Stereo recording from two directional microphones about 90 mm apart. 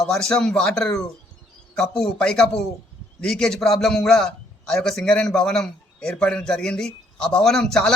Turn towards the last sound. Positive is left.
turn(degrees=5)  # may be behind; listen again after turning